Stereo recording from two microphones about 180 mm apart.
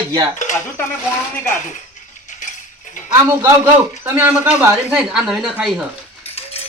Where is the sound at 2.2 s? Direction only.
45° left (ahead or behind).